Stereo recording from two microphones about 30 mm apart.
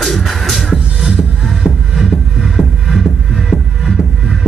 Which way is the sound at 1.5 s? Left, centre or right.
Centre.